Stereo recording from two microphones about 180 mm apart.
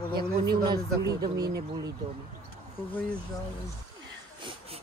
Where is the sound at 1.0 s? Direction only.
20° right (ahead or behind).